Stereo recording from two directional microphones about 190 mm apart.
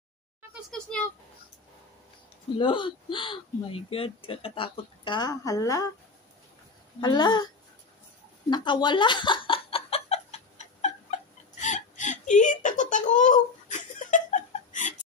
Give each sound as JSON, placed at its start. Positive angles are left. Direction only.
{"t": 2.5, "sound": "speech", "side_deg": 25}
{"t": 7.0, "sound": "speech", "side_deg": 20}
{"t": 8.5, "sound": "a sound", "side_deg": 25}
{"t": 11.6, "sound": "whimper", "side_deg": 40}